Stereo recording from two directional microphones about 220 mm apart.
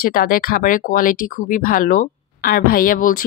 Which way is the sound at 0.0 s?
40° left (ahead or behind).